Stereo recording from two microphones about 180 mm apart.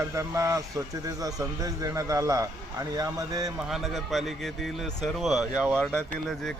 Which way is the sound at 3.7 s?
Centre (ahead or behind).